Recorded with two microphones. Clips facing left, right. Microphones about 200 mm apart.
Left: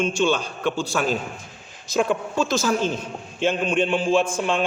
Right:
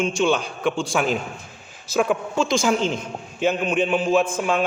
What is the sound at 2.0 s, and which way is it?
Speech, centre (ahead or behind).